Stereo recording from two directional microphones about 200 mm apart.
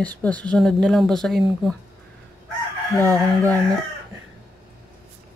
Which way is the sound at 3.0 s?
15° right (ahead or behind).